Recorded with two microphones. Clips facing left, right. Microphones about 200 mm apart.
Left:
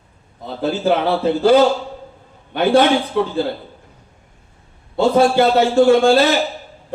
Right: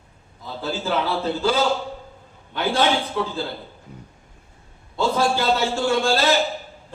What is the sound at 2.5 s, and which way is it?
Speech, 60° left (ahead or behind).